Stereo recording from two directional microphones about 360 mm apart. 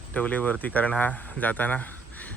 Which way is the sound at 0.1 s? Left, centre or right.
Centre.